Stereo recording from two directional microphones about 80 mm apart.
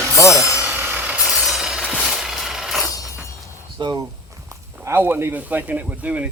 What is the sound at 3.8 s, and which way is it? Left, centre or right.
Speech, right.